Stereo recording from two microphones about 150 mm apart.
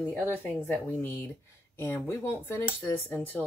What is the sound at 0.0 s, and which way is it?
Speech, 10° left (ahead or behind).